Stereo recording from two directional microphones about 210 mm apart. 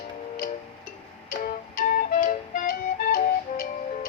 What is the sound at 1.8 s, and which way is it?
Music, 40° left (ahead or behind).